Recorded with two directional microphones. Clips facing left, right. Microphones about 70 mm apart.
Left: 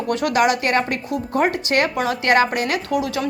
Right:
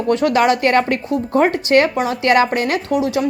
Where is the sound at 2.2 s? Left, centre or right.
Left.